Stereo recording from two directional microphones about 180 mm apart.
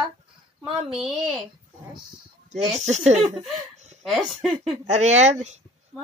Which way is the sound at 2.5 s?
40° right (ahead or behind).